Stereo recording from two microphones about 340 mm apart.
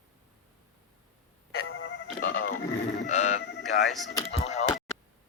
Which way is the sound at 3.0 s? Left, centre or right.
Left.